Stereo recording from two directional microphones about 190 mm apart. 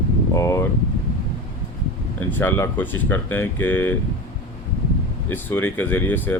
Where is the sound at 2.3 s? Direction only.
10° left (ahead or behind).